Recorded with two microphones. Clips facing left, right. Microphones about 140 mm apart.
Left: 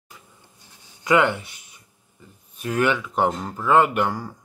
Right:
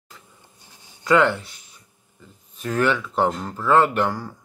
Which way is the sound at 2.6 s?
15° left (ahead or behind).